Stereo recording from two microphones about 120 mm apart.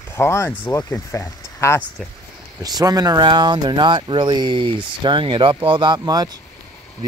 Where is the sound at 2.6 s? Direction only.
30° right (ahead or behind).